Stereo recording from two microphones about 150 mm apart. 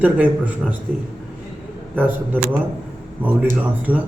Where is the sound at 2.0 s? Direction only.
10° right (ahead or behind).